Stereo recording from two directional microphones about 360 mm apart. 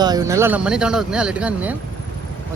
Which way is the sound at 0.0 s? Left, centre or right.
Centre.